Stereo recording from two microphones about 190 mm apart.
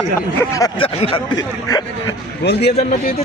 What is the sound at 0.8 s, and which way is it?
Speech, 30° left (ahead or behind).